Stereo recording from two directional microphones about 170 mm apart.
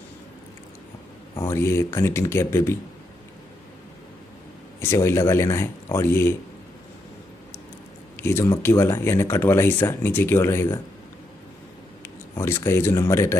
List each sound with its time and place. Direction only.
1.3 s speech: 15° left (ahead or behind)
4.7 s speech: 15° left (ahead or behind)
8.2 s speech: 15° left (ahead or behind)
12.0 s speech: 15° left (ahead or behind)